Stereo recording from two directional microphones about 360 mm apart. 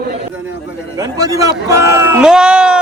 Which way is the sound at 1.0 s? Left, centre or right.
Centre.